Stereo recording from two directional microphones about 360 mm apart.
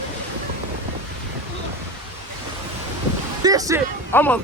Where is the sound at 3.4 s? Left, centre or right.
Centre.